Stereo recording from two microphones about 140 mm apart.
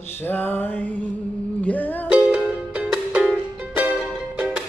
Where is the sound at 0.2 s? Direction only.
15° left (ahead or behind).